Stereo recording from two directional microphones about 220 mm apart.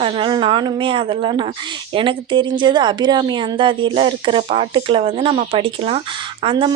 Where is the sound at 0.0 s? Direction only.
20° right (ahead or behind).